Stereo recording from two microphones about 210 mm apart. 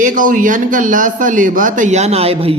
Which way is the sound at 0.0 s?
40° right (ahead or behind).